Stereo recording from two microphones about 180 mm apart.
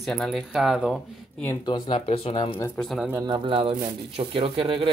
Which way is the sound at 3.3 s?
30° right (ahead or behind).